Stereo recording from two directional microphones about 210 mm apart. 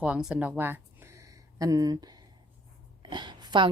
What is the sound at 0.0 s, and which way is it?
A woman's voice, 5° right (ahead or behind).